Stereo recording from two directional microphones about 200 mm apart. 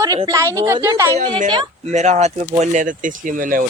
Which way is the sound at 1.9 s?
35° right (ahead or behind).